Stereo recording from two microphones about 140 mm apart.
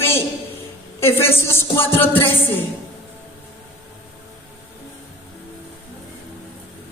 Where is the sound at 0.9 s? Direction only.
15° left (ahead or behind).